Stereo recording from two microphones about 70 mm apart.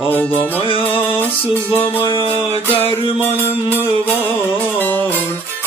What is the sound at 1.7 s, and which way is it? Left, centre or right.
Music, left.